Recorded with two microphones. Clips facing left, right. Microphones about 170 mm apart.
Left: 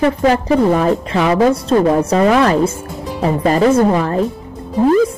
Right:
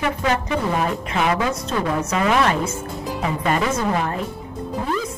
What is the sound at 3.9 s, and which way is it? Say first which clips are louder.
Speech: left 7 dB; 40° left (ahead or behind).